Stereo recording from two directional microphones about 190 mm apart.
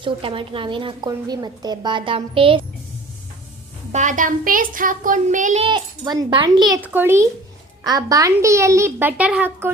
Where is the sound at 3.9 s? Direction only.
40° right (ahead or behind).